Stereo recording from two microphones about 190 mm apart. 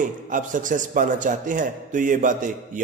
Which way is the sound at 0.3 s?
45° right (ahead or behind).